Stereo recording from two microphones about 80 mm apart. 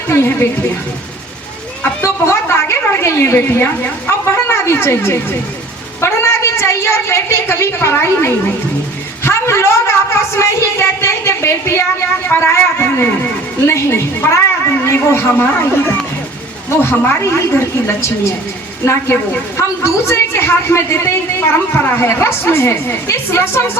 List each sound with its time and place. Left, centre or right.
0.1 s a woman's voice: left
2.0 s a sound: left
6.0 s a woman's voice: left